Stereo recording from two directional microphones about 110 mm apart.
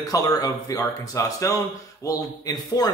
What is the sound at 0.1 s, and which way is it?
Speech, 35° left (ahead or behind).